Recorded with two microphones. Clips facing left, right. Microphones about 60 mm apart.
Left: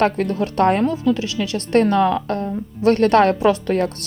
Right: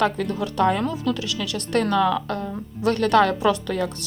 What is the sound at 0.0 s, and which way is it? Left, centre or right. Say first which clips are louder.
Speech: left 4 dB; left.